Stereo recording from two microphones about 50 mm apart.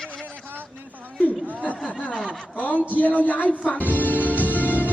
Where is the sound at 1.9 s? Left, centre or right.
Left.